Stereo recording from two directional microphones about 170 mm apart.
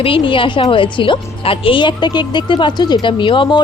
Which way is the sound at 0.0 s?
30° left (ahead or behind).